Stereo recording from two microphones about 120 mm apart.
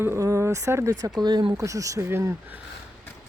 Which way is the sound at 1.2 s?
35° right (ahead or behind).